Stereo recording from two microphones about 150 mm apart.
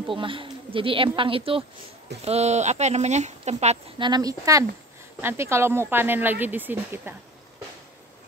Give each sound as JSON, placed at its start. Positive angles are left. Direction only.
{"t": 0.0, "sound": "speech", "side_deg": -35}
{"t": 4.0, "sound": "speech", "side_deg": -25}